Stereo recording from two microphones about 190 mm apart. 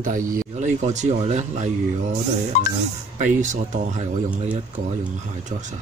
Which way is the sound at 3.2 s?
40° right (ahead or behind).